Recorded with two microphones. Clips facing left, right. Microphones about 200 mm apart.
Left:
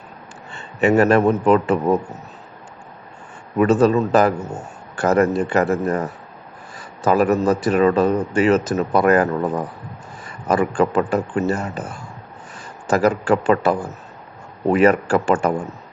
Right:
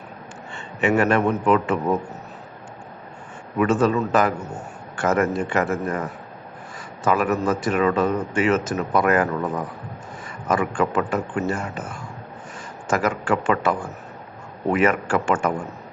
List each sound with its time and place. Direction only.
0.5 s a man's voice: 35° left (ahead or behind)
3.6 s a man's voice: 35° left (ahead or behind)
10.5 s a man's voice: 35° left (ahead or behind)
12.9 s a man's voice: 35° left (ahead or behind)